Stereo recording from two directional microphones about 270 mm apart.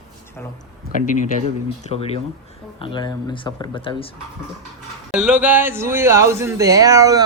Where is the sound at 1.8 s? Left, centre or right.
Left.